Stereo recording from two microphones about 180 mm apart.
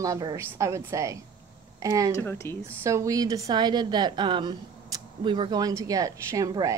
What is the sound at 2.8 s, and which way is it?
A woman's voice, 15° right (ahead or behind).